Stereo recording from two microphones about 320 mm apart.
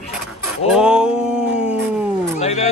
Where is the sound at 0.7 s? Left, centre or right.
Centre.